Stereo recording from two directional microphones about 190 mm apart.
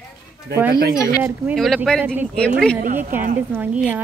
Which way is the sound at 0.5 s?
55° right (ahead or behind).